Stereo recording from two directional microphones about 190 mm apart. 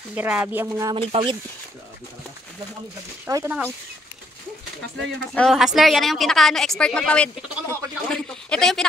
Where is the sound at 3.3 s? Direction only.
20° right (ahead or behind).